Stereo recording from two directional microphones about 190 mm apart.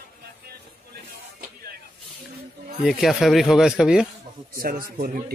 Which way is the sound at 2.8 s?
Centre (ahead or behind).